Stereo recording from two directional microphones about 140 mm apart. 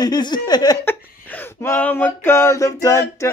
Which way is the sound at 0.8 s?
15° left (ahead or behind).